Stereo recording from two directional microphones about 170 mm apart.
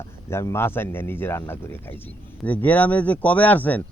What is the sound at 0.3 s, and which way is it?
Speech, 15° left (ahead or behind).